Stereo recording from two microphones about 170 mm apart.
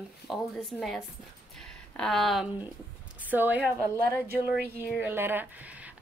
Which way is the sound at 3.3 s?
10° right (ahead or behind).